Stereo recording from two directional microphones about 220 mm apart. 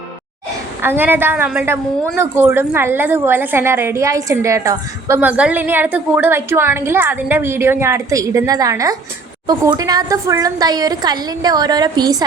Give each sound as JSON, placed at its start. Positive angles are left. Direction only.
{"t": 0.8, "sound": "a woman's voice", "side_deg": -10}